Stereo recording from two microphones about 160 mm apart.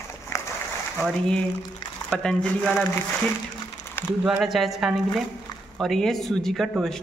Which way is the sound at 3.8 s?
15° left (ahead or behind).